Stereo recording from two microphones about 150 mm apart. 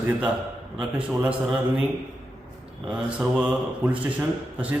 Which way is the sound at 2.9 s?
5° right (ahead or behind).